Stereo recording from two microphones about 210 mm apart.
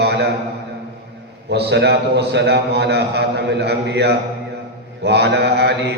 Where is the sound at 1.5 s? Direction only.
55° right (ahead or behind).